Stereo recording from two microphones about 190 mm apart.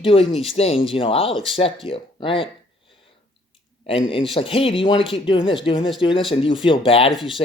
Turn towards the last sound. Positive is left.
turn(degrees=0)  # may be behind; listen again after turning